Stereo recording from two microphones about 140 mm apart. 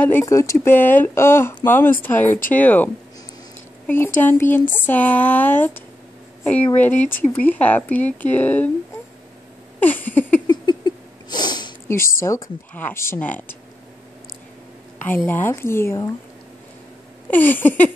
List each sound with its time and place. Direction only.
0.2 s speech: 20° left (ahead or behind)
9.8 s speech: 10° left (ahead or behind)
10.4 s a sound: 30° left (ahead or behind)
11.9 s speech: 20° left (ahead or behind)
15.0 s speech: 15° left (ahead or behind)
17.3 s speech: 15° left (ahead or behind)